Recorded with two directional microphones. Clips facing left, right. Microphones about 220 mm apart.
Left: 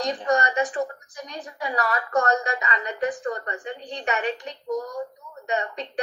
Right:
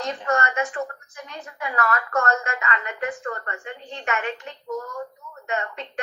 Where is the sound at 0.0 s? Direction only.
15° left (ahead or behind).